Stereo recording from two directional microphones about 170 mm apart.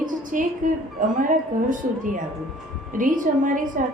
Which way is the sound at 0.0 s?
50° right (ahead or behind).